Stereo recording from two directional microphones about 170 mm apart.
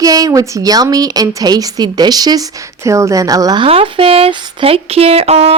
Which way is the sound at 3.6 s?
35° right (ahead or behind).